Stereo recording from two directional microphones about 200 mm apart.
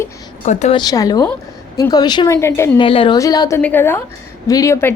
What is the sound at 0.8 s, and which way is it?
A woman's voice, 20° left (ahead or behind).